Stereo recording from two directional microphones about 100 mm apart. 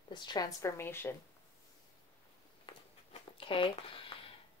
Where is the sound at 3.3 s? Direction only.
60° left (ahead or behind).